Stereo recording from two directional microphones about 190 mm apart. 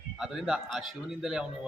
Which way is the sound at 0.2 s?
5° right (ahead or behind).